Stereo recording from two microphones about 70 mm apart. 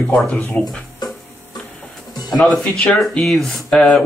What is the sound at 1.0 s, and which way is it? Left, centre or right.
Music, left.